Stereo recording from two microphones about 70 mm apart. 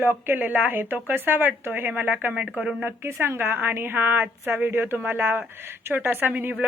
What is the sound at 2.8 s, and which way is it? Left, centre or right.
A woman's voice, right.